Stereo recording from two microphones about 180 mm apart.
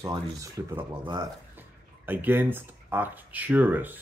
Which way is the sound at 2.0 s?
10° right (ahead or behind).